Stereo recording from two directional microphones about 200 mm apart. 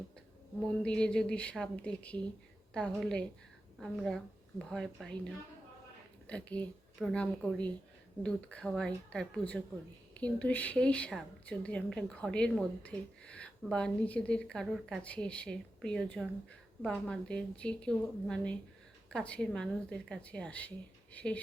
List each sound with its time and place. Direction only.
0.8 s a woman's voice: 5° left (ahead or behind)